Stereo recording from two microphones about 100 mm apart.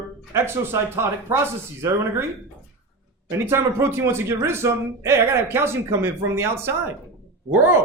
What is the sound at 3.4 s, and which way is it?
Speech, 25° right (ahead or behind).